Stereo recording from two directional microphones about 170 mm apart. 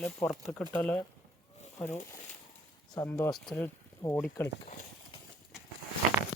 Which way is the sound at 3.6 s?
15° left (ahead or behind).